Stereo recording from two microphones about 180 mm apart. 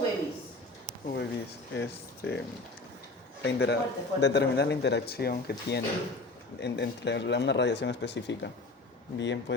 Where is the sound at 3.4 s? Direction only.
70° left (ahead or behind).